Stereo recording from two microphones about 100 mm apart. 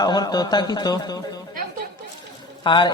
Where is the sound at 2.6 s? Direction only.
50° left (ahead or behind).